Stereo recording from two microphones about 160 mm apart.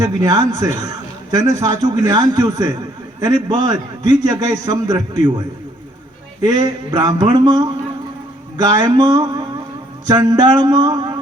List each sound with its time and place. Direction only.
0.0 s a man's voice: 20° right (ahead or behind)
6.4 s a man's voice: 25° right (ahead or behind)